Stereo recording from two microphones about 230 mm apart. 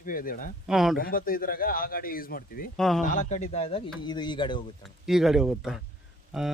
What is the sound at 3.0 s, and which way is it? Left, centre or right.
Speech, left.